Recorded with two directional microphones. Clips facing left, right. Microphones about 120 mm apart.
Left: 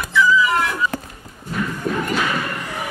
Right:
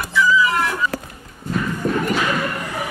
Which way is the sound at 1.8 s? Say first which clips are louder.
Right 3 dB; 40° right (ahead or behind).